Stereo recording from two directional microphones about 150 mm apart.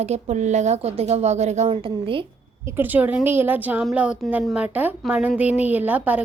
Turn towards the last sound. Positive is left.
turn(degrees=-10)  # may be behind; listen again after turning